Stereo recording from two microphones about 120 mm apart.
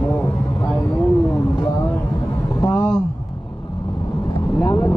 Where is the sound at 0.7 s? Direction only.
15° left (ahead or behind).